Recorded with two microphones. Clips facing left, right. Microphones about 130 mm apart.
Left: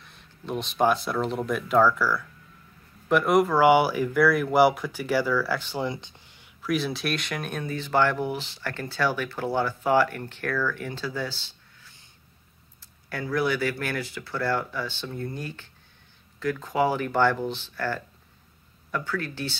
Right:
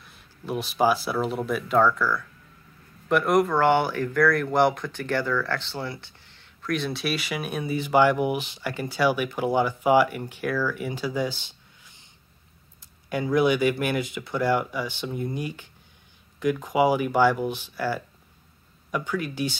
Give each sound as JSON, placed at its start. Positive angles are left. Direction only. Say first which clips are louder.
{"t": 0.0, "sound": "speech", "louder": "right 1 dB", "side_deg": -5}
{"t": 13.1, "sound": "speech", "louder": "right 5 dB", "side_deg": -20}